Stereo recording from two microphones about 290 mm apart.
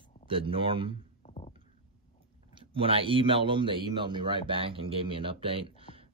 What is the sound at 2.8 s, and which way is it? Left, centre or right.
Speech, centre.